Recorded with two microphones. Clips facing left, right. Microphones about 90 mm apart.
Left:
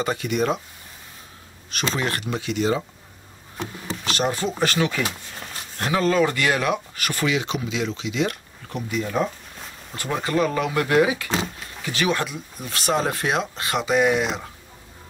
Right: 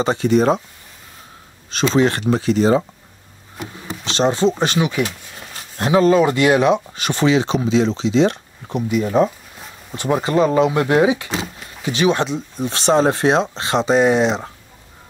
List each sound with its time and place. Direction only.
0.0 s speech: 30° right (ahead or behind)
1.7 s speech: 25° right (ahead or behind)
4.0 s speech: 25° right (ahead or behind)